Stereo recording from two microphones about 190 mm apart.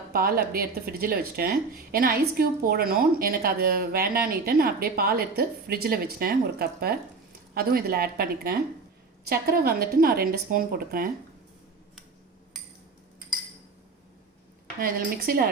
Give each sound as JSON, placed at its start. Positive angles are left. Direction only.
{"t": 0.1, "sound": "speech", "side_deg": -50}
{"t": 14.8, "sound": "speech", "side_deg": -50}